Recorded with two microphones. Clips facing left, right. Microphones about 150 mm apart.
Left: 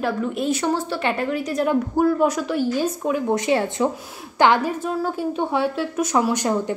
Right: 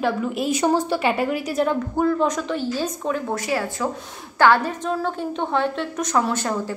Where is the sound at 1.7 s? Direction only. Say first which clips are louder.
Left 6 dB; 10° left (ahead or behind).